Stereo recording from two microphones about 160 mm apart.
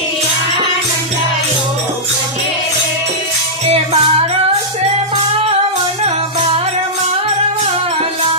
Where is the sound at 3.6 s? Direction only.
40° right (ahead or behind).